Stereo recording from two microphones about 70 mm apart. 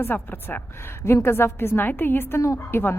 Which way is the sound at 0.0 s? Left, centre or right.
Left.